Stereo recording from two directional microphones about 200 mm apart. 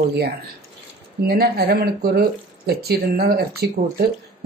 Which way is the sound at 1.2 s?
50° right (ahead or behind).